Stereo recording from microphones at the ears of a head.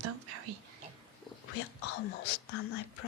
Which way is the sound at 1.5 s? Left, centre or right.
Left.